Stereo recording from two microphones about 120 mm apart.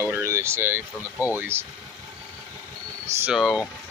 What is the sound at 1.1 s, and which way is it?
Speech, 25° left (ahead or behind).